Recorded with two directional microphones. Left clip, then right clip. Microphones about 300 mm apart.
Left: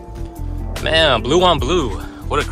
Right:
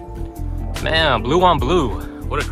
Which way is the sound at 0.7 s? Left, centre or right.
Centre.